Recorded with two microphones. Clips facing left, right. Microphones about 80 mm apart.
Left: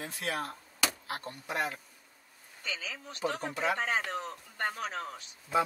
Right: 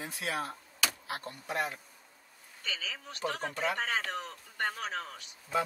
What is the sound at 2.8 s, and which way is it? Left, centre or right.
Speech, left.